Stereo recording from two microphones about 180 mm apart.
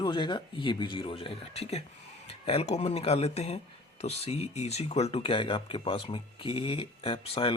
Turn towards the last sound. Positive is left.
turn(degrees=30)  # may be behind; listen again after turning